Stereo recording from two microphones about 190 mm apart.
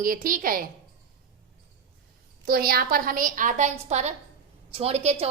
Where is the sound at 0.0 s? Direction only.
45° right (ahead or behind).